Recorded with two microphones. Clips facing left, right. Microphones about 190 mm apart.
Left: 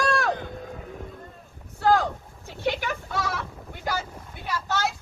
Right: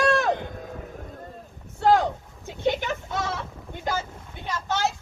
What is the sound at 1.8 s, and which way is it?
A woman's voice, 25° right (ahead or behind).